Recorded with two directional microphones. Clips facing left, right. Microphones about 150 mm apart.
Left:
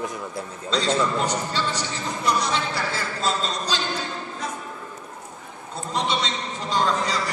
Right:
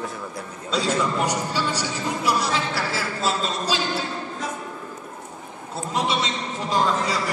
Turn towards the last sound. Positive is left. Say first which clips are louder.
# right 1 dB
turn(degrees=-5)  # may be behind; listen again after turning